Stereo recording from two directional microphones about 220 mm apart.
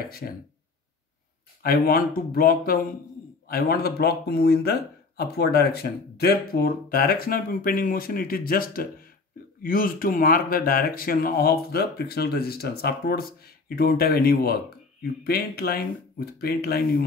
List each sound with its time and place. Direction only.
1.6 s speech: 45° left (ahead or behind)